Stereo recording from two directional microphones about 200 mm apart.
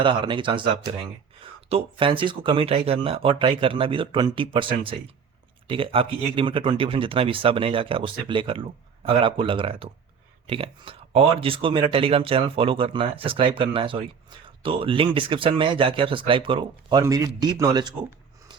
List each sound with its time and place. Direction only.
0.0 s speech: 25° right (ahead or behind)